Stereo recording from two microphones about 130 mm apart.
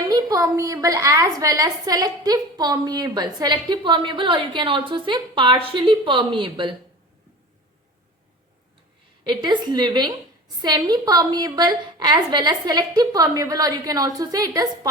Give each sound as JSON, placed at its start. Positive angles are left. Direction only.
{"t": 0.1, "sound": "a woman's voice", "side_deg": -25}
{"t": 9.2, "sound": "a woman's voice", "side_deg": -35}